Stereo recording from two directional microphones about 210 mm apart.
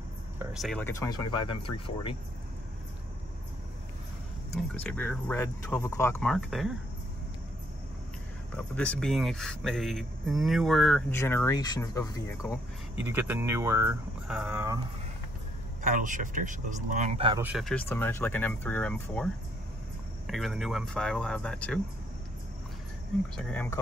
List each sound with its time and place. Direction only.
0.4 s speech: 5° right (ahead or behind)
0.8 s speech: 15° left (ahead or behind)
4.8 s speech: 10° left (ahead or behind)
8.5 s speech: 5° left (ahead or behind)
12.9 s speech: 10° right (ahead or behind)
15.8 s speech: 40° right (ahead or behind)
17.4 s speech: 5° right (ahead or behind)
23.3 s speech: 5° left (ahead or behind)